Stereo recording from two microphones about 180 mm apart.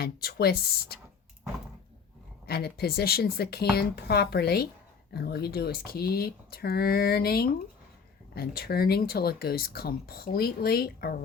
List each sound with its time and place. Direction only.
0.0 s speech: 60° left (ahead or behind)
2.5 s speech: 60° left (ahead or behind)